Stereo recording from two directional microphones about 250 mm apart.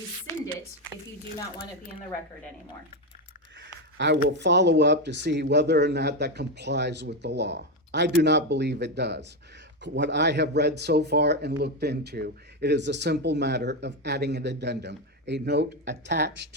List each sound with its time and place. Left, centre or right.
3.6 s speech: right